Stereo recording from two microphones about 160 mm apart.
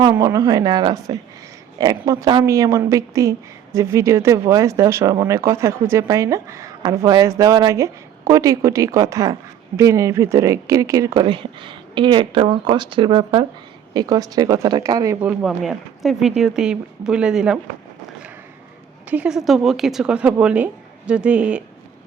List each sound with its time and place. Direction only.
0.2 s a woman's voice: 25° right (ahead or behind)
15.2 s speech: 10° right (ahead or behind)
19.1 s speech: 5° right (ahead or behind)